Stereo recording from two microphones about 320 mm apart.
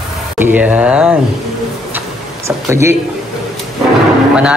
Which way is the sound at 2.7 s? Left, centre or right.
Centre.